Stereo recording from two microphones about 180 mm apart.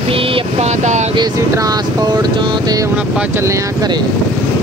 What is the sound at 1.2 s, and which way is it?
Speech, 20° right (ahead or behind).